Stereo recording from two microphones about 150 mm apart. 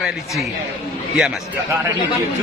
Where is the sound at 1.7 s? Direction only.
15° right (ahead or behind).